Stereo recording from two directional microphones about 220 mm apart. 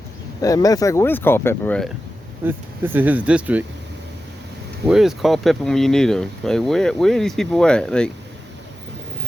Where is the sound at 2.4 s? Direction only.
10° right (ahead or behind).